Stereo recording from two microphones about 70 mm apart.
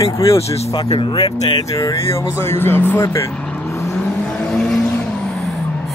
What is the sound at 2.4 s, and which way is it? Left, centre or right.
Speech, left.